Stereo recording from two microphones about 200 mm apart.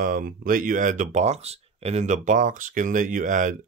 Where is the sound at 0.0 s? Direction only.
45° right (ahead or behind).